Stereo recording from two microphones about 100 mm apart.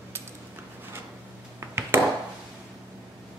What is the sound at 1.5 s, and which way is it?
Ping, 25° right (ahead or behind).